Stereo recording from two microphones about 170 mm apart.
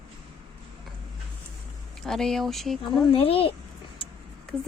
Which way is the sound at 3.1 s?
35° left (ahead or behind).